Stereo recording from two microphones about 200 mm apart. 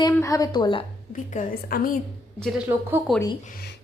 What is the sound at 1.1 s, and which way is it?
Speech, 40° left (ahead or behind).